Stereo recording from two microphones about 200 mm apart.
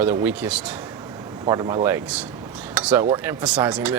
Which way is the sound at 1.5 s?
20° right (ahead or behind).